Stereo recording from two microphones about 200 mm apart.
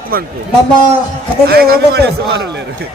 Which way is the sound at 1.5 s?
50° right (ahead or behind).